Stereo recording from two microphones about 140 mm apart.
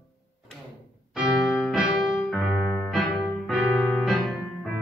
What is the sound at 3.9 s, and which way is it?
Piano, 5° left (ahead or behind).